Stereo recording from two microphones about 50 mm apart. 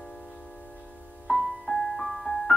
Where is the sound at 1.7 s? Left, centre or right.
Centre.